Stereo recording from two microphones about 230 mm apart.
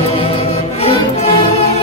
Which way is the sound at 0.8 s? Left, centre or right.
Left.